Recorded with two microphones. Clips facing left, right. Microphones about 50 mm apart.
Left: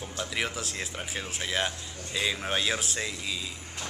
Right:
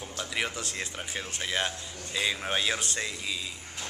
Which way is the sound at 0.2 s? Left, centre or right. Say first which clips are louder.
Even; centre.